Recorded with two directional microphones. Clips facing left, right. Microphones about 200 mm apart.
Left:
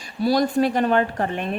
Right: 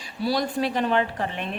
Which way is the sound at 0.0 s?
45° left (ahead or behind).